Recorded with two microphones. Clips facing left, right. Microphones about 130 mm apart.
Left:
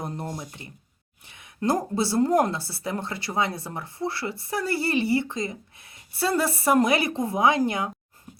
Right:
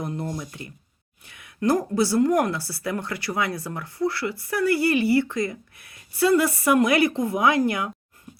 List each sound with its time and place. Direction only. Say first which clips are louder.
0.0 s speech: right 3 dB; 30° left (ahead or behind)